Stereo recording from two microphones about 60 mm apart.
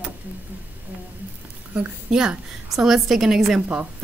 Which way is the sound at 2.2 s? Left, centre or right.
Centre.